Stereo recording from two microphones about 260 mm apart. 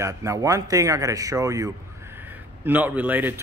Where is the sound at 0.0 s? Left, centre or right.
Centre.